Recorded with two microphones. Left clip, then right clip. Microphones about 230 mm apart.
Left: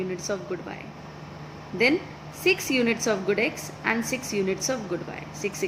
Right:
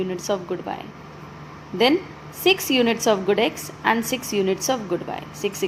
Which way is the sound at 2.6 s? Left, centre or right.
Right.